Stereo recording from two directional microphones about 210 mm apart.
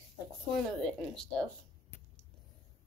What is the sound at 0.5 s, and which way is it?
Speech, 5° left (ahead or behind).